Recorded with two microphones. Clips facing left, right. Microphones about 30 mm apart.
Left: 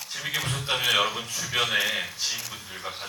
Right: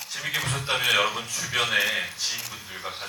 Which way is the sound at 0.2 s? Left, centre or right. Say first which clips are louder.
Right 1 dB; centre.